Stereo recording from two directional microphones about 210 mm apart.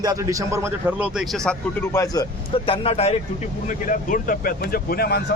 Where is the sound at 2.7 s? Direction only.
30° left (ahead or behind).